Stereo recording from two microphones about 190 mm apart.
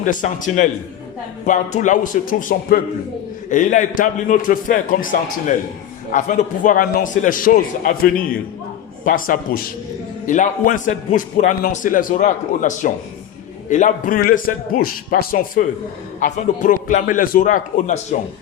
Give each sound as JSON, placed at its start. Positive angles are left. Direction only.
{"t": 0.0, "sound": "a man's voice", "side_deg": 45}